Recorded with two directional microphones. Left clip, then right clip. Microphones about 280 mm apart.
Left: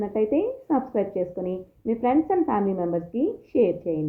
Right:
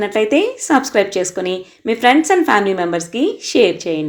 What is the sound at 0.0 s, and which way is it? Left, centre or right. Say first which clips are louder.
Speech: right 9 dB; right.